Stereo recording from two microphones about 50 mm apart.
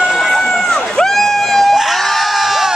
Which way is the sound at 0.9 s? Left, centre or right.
Centre.